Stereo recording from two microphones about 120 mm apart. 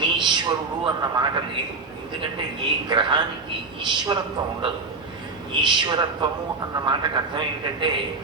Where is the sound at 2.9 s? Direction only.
40° right (ahead or behind).